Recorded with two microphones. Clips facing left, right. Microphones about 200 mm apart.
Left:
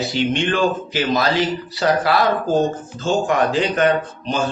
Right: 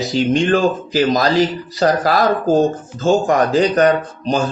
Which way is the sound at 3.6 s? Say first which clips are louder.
Right 4 dB; 35° right (ahead or behind).